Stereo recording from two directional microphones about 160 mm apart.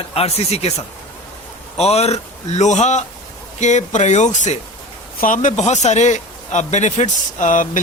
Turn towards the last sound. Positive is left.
turn(degrees=55)  # may be behind; listen again after turning